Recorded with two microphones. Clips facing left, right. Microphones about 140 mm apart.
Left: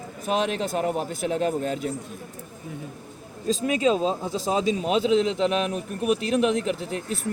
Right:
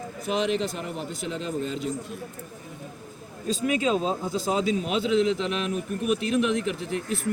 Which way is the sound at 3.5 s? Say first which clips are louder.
Left 2 dB; 35° left (ahead or behind).